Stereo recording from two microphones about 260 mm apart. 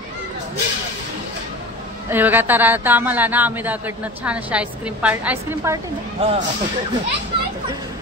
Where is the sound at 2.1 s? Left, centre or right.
Centre.